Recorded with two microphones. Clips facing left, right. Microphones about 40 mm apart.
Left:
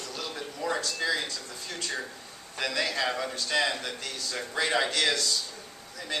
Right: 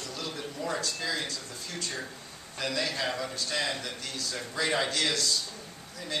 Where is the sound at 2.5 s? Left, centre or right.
Left.